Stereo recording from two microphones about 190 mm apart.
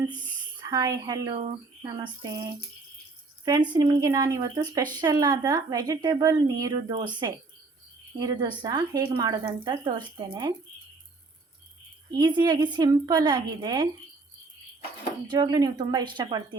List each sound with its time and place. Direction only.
0.6 s a woman's voice: 20° right (ahead or behind)
8.2 s speech: 20° right (ahead or behind)
12.1 s speech: 20° right (ahead or behind)
15.3 s speech: 20° right (ahead or behind)